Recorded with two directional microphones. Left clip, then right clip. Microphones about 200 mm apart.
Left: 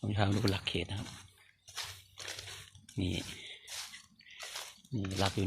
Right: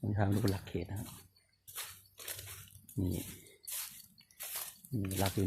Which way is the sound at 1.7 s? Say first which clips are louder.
Left 5 dB; 40° left (ahead or behind).